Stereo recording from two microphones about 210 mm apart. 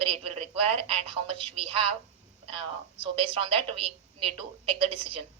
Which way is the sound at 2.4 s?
25° right (ahead or behind).